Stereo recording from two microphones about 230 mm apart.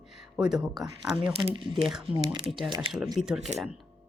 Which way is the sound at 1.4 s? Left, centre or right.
Right.